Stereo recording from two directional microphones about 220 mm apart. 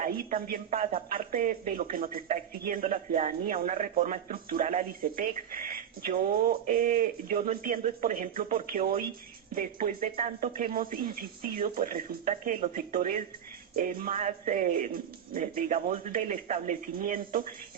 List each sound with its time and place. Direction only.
0.0 s speech: 40° right (ahead or behind)